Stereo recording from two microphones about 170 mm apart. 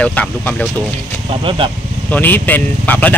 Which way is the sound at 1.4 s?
30° right (ahead or behind).